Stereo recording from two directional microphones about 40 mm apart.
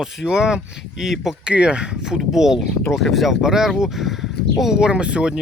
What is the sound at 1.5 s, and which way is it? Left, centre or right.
Speech, right.